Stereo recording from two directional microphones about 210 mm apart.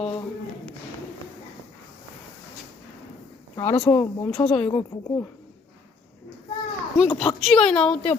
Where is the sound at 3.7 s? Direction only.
5° left (ahead or behind).